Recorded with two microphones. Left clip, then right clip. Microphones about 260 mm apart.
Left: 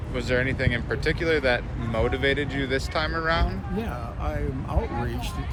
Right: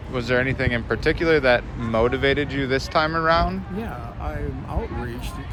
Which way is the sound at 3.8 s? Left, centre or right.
Centre.